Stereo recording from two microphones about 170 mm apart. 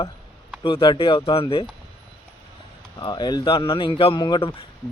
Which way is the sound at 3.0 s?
25° left (ahead or behind).